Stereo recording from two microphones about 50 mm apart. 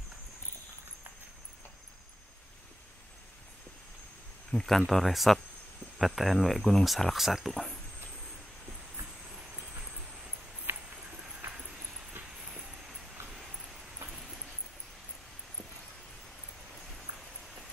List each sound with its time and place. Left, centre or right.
4.5 s speech: centre
9.3 s train: centre
10.7 s a sound: right
11.1 s train: centre
12.4 s vehicle: centre